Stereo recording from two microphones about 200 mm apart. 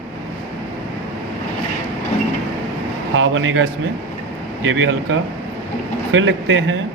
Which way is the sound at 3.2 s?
75° right (ahead or behind).